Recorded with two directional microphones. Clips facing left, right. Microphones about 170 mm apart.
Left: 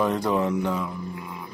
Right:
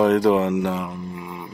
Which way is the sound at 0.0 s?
85° right.